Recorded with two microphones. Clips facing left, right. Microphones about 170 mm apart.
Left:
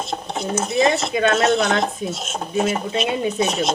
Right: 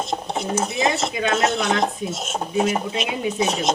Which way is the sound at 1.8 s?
15° right (ahead or behind).